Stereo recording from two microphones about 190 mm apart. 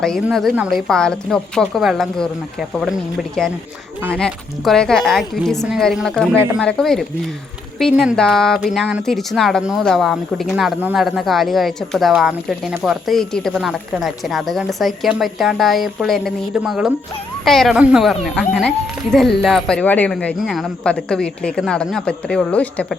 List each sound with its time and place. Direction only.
0.0 s speech: centre (ahead or behind)